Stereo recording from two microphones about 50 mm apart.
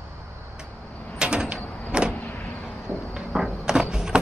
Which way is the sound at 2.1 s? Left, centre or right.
Left.